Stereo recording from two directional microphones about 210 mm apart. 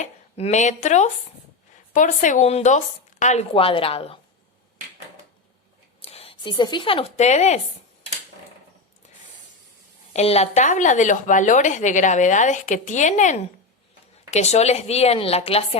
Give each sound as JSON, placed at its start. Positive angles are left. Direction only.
{"t": 0.0, "sound": "speech", "side_deg": 30}
{"t": 6.0, "sound": "speech", "side_deg": 30}
{"t": 10.1, "sound": "speech", "side_deg": 30}